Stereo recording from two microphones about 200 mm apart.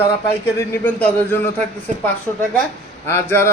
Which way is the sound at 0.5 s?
10° left (ahead or behind).